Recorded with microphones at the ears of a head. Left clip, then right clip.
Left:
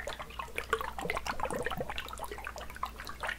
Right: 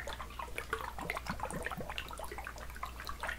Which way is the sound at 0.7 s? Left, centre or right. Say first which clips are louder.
Left 7 dB; left.